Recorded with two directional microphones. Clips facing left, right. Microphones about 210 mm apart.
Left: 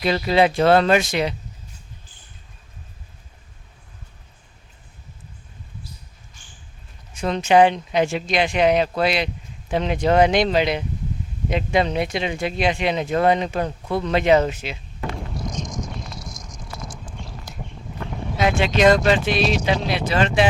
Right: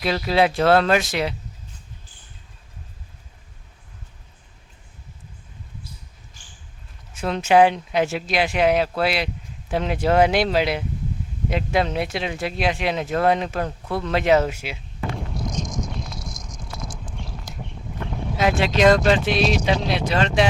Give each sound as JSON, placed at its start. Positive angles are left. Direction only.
{"t": 0.0, "sound": "speech", "side_deg": 0}
{"t": 7.1, "sound": "speech", "side_deg": -5}
{"t": 15.3, "sound": "a sound", "side_deg": 0}
{"t": 18.1, "sound": "speech", "side_deg": 0}